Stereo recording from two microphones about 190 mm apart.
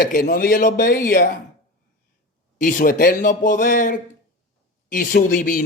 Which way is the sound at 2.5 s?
45° left (ahead or behind).